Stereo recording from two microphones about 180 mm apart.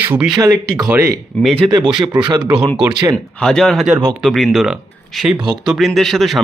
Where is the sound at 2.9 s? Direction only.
20° right (ahead or behind).